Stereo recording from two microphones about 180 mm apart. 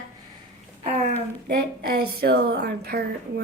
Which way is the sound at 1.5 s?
60° right (ahead or behind).